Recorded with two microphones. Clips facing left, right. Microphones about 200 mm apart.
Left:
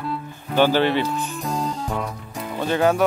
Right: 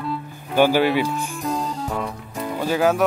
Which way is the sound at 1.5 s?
Centre (ahead or behind).